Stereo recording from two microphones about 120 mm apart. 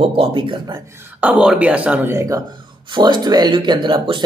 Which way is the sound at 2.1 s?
25° right (ahead or behind).